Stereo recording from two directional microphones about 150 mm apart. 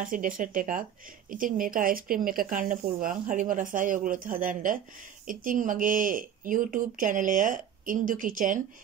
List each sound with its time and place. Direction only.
0.0 s speech: 65° right (ahead or behind)